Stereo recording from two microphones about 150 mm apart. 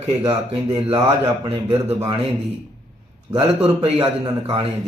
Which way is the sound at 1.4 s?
35° right (ahead or behind).